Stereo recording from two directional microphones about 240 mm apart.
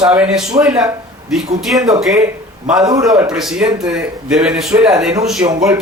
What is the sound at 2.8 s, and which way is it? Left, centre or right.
Speech, centre.